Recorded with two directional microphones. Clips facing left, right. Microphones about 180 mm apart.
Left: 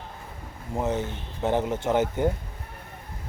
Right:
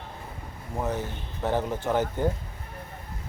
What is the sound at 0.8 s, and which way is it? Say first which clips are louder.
Speech: left 3 dB; 20° left (ahead or behind).